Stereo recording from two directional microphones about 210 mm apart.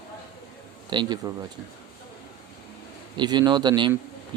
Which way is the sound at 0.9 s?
20° right (ahead or behind).